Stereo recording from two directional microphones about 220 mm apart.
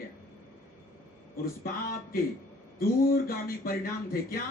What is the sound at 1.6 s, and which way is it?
A man's voice, 40° left (ahead or behind).